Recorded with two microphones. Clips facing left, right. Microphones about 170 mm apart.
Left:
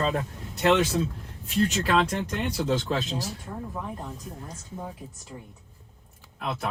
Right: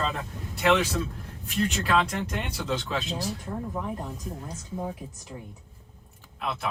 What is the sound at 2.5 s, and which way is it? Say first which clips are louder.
Speech: left 5 dB; 40° left (ahead or behind).